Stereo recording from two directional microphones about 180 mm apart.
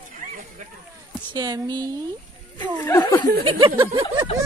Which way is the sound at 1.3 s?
20° right (ahead or behind).